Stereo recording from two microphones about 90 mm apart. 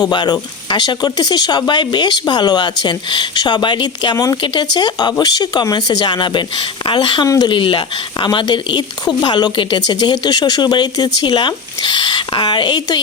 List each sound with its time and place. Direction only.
0.0 s a woman's voice: 55° left (ahead or behind)